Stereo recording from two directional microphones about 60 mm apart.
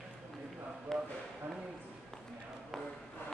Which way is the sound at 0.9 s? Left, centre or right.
Centre.